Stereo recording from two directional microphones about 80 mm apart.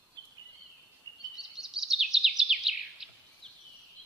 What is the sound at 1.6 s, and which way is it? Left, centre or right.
Bird vocalization, centre.